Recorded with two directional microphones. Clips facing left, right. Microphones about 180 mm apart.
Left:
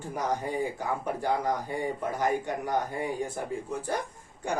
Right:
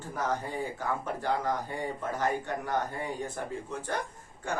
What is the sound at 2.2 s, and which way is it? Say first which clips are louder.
A man's voice: left 2 dB; 15° left (ahead or behind).